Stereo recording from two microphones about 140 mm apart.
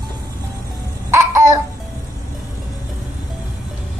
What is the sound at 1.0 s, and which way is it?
Babbling, 20° right (ahead or behind).